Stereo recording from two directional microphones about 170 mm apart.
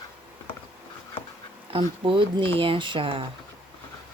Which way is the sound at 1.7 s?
30° right (ahead or behind).